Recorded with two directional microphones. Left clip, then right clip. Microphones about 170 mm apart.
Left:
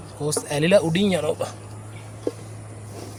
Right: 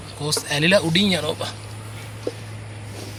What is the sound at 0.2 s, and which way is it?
Speech, 60° left (ahead or behind).